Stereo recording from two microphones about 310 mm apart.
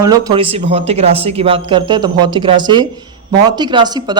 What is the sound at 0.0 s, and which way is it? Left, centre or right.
Speech, centre.